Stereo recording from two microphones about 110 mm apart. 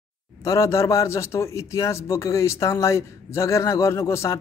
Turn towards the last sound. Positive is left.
turn(degrees=25)  # may be behind; listen again after turning